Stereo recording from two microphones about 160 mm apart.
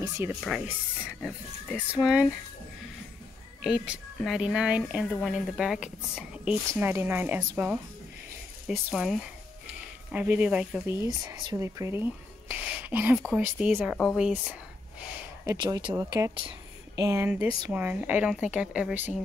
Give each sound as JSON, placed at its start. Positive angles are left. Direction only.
{"t": 0.4, "sound": "speech", "side_deg": 0}
{"t": 1.9, "sound": "speech", "side_deg": -5}
{"t": 3.6, "sound": "a woman's voice", "side_deg": -5}
{"t": 11.2, "sound": "a woman's voice", "side_deg": -20}
{"t": 15.4, "sound": "speech", "side_deg": -20}
{"t": 16.3, "sound": "a sound", "side_deg": -35}
{"t": 17.0, "sound": "a woman's voice", "side_deg": -15}